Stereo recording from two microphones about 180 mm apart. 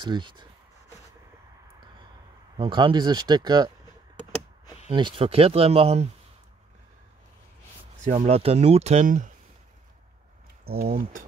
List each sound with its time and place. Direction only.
0.0 s speech: 25° right (ahead or behind)
2.5 s speech: 25° right (ahead or behind)
4.9 s speech: 30° right (ahead or behind)
8.1 s speech: 30° right (ahead or behind)
10.7 s speech: 55° right (ahead or behind)